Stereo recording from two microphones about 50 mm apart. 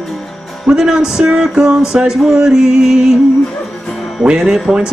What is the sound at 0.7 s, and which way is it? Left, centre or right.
Speech, centre.